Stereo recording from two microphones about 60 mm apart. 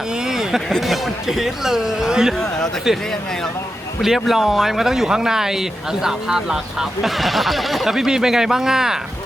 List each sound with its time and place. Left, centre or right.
0.3 s a sound: centre
0.7 s speech: centre
4.0 s speech: centre